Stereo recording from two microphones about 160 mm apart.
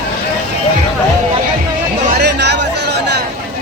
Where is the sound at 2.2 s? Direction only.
90° right.